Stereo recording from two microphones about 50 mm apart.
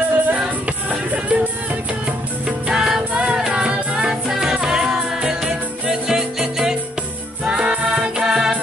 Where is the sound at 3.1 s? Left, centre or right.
Centre.